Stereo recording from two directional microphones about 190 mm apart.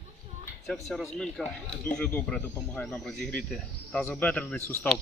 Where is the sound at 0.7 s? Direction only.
Centre (ahead or behind).